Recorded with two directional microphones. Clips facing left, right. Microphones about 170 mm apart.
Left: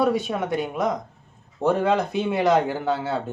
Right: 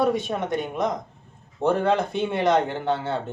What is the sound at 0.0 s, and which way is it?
Speech, 5° left (ahead or behind).